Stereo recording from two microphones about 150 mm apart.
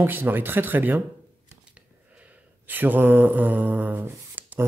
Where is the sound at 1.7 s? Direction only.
10° right (ahead or behind).